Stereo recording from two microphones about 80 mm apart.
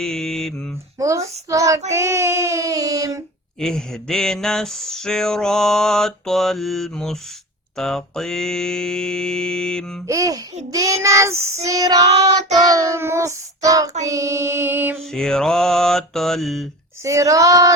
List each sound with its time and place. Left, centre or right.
0.0 s mantra: centre
0.9 s child singing: right
3.6 s a sound: centre
7.8 s mantra: centre
10.1 s child singing: right
15.1 s a sound: centre
17.0 s child singing: right